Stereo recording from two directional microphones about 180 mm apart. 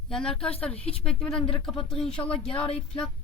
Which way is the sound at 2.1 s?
30° left (ahead or behind).